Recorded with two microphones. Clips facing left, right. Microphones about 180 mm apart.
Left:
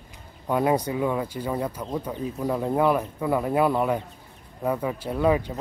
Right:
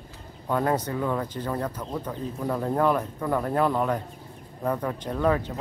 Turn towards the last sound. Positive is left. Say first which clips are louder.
# left 2 dB
turn(degrees=10)  # may be behind; listen again after turning